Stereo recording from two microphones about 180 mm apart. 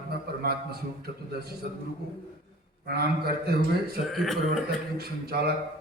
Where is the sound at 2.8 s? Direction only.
60° right (ahead or behind).